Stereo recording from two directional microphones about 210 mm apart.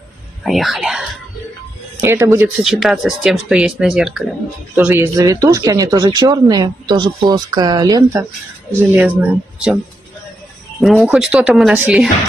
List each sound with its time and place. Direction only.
0.4 s speech: centre (ahead or behind)
2.0 s speech: 15° right (ahead or behind)
10.8 s speech: centre (ahead or behind)